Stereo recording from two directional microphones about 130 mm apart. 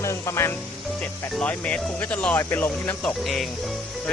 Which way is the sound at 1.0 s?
10° left (ahead or behind).